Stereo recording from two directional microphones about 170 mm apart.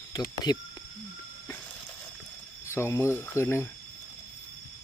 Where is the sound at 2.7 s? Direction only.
15° left (ahead or behind).